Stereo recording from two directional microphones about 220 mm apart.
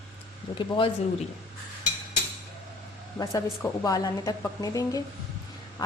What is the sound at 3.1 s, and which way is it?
A woman's voice, 15° left (ahead or behind).